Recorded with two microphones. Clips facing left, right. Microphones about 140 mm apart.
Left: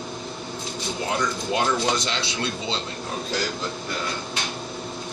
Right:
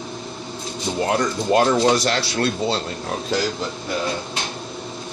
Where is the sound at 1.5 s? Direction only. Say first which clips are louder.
Right 8 dB; 60° right (ahead or behind).